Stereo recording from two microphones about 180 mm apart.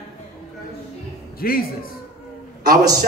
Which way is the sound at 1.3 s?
55° left (ahead or behind).